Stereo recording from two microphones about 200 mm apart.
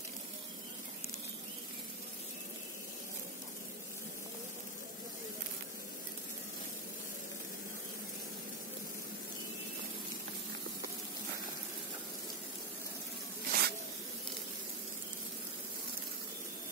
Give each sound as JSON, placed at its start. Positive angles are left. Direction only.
{"t": 13.5, "sound": "zipper", "side_deg": -50}